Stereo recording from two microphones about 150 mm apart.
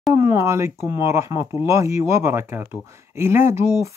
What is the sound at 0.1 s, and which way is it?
Speech, 20° right (ahead or behind).